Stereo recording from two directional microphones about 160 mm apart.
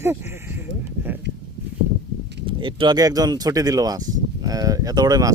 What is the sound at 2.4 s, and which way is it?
Speech, 30° right (ahead or behind).